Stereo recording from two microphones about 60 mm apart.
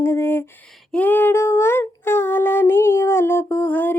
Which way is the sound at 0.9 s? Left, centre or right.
Left.